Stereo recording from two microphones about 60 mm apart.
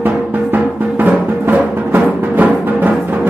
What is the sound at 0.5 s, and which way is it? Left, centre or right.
Music, right.